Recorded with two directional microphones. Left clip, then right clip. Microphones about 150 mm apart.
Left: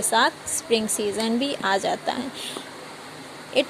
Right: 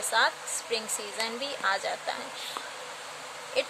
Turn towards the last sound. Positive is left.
turn(degrees=35)  # may be behind; listen again after turning